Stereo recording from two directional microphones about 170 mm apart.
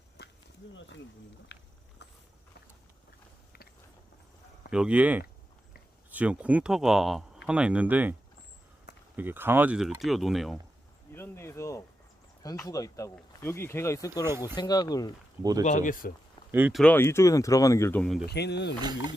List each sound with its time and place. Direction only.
0.7 s speech: 90° left
1.5 s a sound: 90° left
4.7 s speech: 5° right (ahead or behind)
9.1 s speech: 10° right (ahead or behind)
11.1 s speech: 15° left (ahead or behind)
14.3 s speech: 15° right (ahead or behind)
14.5 s speech: 25° left (ahead or behind)
15.6 s speech: 45° left (ahead or behind)
16.5 s speech: 10° right (ahead or behind)
16.7 s speech: 10° left (ahead or behind)
18.3 s speech: 80° left
18.8 s speech: 25° right (ahead or behind)